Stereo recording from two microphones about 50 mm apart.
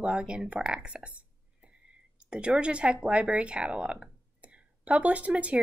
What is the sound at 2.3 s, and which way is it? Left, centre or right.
Speech, centre.